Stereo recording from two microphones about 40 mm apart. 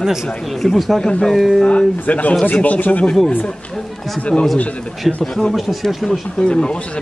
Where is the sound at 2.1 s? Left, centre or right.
Left.